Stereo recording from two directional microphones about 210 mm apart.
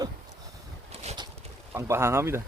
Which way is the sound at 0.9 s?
30° right (ahead or behind).